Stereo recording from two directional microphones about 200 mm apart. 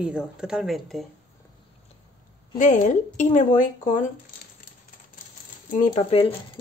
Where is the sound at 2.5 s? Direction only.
40° left (ahead or behind).